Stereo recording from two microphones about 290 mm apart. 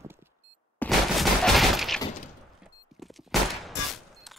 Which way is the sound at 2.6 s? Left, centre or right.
Centre.